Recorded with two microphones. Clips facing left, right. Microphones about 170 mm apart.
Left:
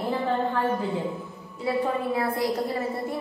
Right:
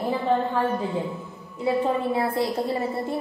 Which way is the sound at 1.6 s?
25° right (ahead or behind).